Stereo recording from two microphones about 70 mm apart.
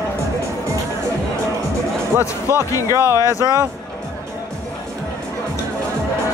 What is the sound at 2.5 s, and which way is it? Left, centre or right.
Speech, right.